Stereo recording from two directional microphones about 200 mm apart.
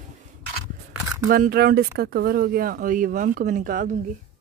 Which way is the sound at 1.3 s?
50° right (ahead or behind).